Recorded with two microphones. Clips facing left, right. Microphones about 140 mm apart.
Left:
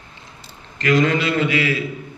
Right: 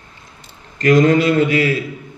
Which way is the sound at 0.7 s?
45° right (ahead or behind).